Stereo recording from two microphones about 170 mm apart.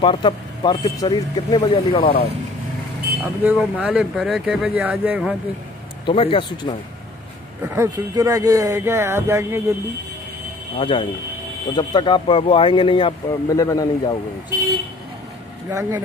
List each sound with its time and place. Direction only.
0.0 s speech: 30° left (ahead or behind)
1.6 s speech: 30° left (ahead or behind)
3.4 s speech: 5° right (ahead or behind)
6.0 s speech: 35° left (ahead or behind)
7.6 s speech: 15° right (ahead or behind)
10.8 s speech: 35° left (ahead or behind)
15.7 s speech: 20° right (ahead or behind)